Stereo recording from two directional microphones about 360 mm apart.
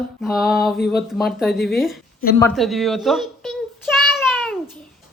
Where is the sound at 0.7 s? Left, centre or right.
Left.